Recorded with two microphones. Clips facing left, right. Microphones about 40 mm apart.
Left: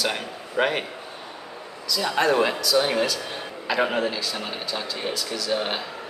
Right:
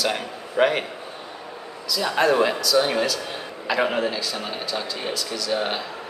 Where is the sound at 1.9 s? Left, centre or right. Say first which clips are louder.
Right 1 dB; centre.